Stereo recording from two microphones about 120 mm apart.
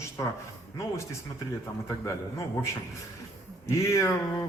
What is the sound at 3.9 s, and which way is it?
Speech, 25° left (ahead or behind).